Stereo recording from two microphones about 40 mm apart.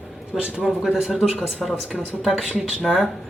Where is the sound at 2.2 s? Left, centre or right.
Centre.